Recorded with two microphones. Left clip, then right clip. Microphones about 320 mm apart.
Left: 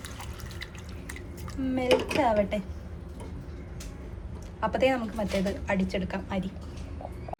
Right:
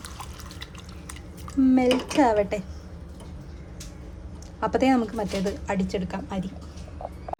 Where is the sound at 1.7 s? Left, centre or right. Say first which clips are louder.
Even; centre.